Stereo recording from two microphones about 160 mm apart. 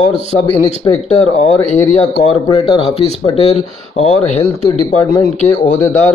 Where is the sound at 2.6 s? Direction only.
30° left (ahead or behind).